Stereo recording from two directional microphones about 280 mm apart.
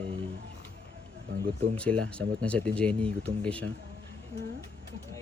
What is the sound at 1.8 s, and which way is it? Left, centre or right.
Speech, centre.